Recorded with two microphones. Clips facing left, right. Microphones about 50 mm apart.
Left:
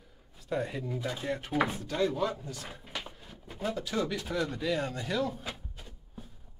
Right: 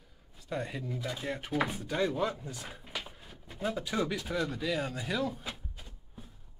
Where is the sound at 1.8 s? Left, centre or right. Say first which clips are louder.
Left 1 dB; centre.